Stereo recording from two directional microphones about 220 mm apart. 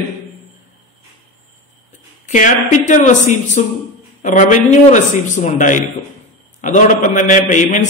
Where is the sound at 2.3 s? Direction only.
35° left (ahead or behind).